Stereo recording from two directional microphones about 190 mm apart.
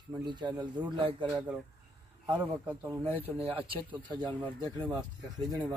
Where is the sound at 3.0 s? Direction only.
30° right (ahead or behind).